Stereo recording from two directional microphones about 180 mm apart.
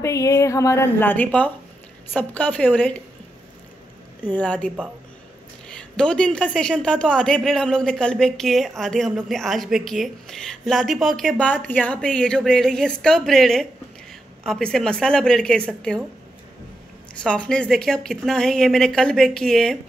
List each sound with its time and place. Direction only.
0.0 s a woman's voice: 15° left (ahead or behind)
4.3 s a woman's voice: 5° left (ahead or behind)
17.2 s speech: 5° left (ahead or behind)